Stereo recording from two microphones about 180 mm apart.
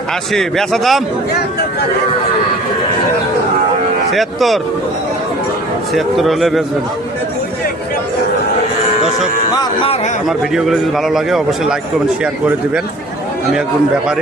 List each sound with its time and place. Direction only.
0.3 s a man's voice: centre (ahead or behind)
4.1 s a man's voice: centre (ahead or behind)
5.9 s a man's voice: centre (ahead or behind)
9.6 s speech: 30° left (ahead or behind)
10.2 s a man's voice: centre (ahead or behind)